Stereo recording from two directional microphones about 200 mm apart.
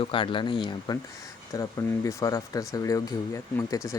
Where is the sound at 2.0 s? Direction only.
15° left (ahead or behind).